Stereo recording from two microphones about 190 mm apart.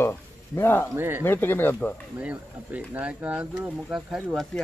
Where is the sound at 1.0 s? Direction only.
10° right (ahead or behind).